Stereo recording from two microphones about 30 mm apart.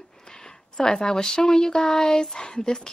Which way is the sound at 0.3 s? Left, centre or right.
Left.